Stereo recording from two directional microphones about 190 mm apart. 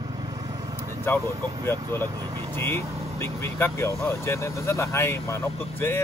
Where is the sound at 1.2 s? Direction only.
20° right (ahead or behind).